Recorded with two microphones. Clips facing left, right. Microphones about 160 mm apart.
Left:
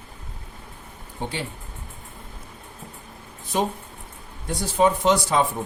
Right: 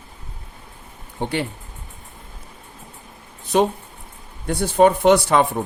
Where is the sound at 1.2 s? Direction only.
65° right (ahead or behind).